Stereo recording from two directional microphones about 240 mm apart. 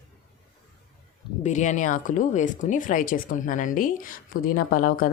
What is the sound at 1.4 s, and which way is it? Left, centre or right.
Speech, left.